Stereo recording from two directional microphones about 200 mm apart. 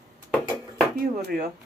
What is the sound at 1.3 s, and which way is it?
Speech, 50° right (ahead or behind).